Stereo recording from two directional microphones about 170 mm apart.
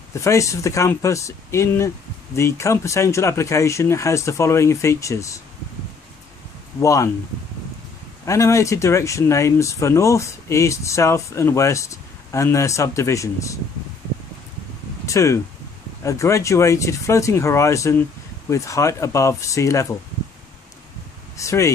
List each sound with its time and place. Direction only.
0.1 s speech: 15° left (ahead or behind)
6.8 s speech: 20° left (ahead or behind)
8.3 s speech: 20° left (ahead or behind)
15.0 s speech: 20° left (ahead or behind)
21.4 s speech: 15° left (ahead or behind)